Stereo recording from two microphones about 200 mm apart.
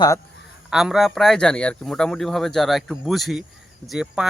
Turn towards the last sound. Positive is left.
turn(degrees=-5)  # may be behind; listen again after turning